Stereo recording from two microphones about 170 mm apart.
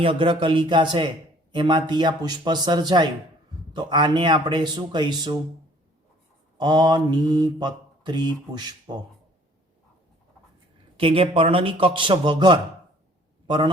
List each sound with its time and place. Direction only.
0.0 s mantra: 30° right (ahead or behind)
6.6 s mantra: 25° right (ahead or behind)
10.9 s a man's voice: 30° right (ahead or behind)